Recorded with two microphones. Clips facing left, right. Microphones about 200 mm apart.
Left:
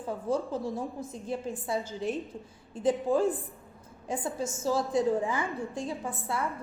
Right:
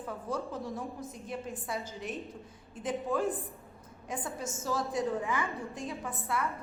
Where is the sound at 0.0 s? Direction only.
30° left (ahead or behind).